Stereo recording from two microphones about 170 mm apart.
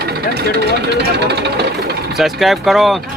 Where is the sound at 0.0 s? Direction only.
70° right (ahead or behind).